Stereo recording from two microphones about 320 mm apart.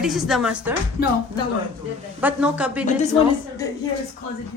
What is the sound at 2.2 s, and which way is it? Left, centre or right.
Speech, centre.